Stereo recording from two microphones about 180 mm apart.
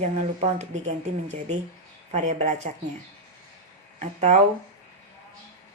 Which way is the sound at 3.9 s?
40° right (ahead or behind).